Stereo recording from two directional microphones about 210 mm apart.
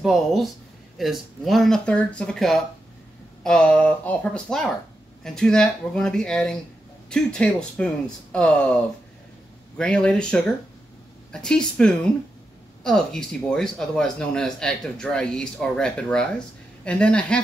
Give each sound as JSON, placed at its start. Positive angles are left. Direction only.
{"t": 0.0, "sound": "speech", "side_deg": 0}
{"t": 9.8, "sound": "speech", "side_deg": 5}